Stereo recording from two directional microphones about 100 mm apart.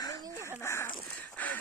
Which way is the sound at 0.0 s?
40° left (ahead or behind).